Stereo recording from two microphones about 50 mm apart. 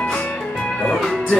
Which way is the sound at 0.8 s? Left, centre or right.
Centre.